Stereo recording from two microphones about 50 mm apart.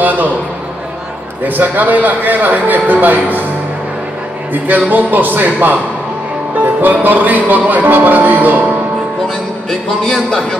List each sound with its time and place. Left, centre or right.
0.0 s a man's voice: right
1.4 s music: right
4.6 s music: right
9.7 s a man's voice: centre